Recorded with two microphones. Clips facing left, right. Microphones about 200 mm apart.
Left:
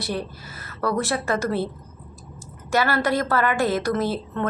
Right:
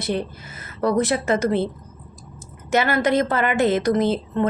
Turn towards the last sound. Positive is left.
turn(degrees=-20)  # may be behind; listen again after turning